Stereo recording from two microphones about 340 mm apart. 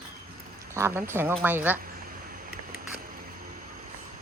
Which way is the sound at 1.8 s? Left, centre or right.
Right.